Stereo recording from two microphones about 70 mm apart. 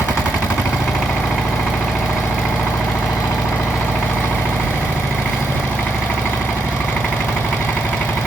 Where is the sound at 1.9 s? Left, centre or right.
Centre.